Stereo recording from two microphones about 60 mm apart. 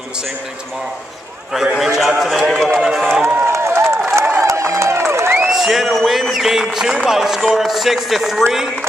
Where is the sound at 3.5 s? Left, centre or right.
Right.